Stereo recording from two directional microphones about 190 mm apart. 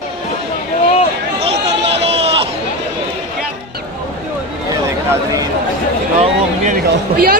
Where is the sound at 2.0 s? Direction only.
30° right (ahead or behind).